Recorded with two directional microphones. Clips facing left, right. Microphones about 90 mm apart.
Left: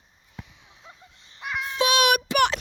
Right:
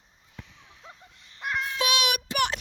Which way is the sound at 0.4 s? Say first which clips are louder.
Left 2 dB; 10° left (ahead or behind).